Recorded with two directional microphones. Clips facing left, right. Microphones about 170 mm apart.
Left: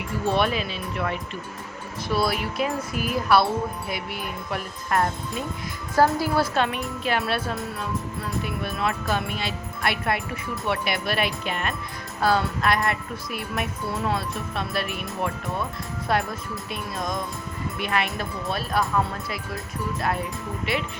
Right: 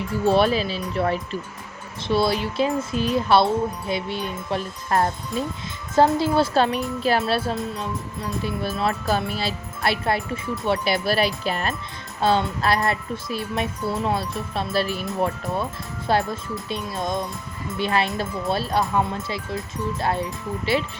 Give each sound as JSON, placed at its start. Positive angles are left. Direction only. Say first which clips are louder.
{"t": 0.3, "sound": "music", "louder": "right 5 dB", "side_deg": -30}
{"t": 2.0, "sound": "speech", "louder": "right 4 dB", "side_deg": -25}
{"t": 7.2, "sound": "music", "louder": "right 3 dB", "side_deg": -30}
{"t": 16.0, "sound": "speech", "louder": "right 3 dB", "side_deg": -30}